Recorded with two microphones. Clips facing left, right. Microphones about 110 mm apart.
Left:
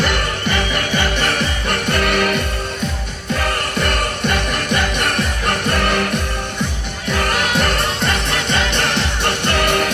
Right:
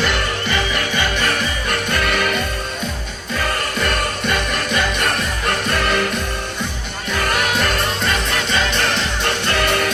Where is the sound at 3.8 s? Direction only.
55° left (ahead or behind).